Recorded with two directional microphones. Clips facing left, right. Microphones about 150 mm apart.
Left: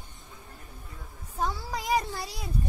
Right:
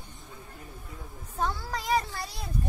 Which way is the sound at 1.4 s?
10° left (ahead or behind).